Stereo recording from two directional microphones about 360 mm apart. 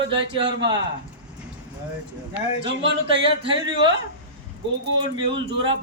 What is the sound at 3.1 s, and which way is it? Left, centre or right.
Speech, centre.